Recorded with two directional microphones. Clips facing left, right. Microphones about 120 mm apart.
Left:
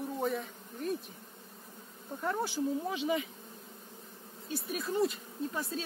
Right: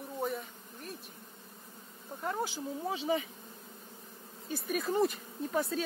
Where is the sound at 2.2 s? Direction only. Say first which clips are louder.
Left 1 dB; 20° right (ahead or behind).